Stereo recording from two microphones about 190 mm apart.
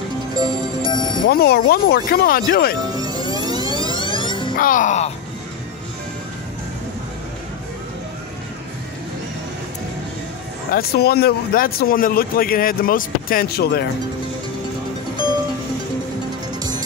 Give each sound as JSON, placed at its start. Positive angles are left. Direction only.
{"t": 0.8, "sound": "music", "side_deg": 25}
{"t": 1.2, "sound": "speech", "side_deg": 55}
{"t": 2.9, "sound": "music", "side_deg": -20}
{"t": 3.2, "sound": "music", "side_deg": 25}
{"t": 4.6, "sound": "speech", "side_deg": 45}
{"t": 10.7, "sound": "speech", "side_deg": 55}